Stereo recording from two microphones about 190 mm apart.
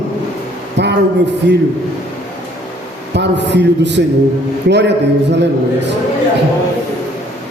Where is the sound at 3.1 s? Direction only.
65° right (ahead or behind).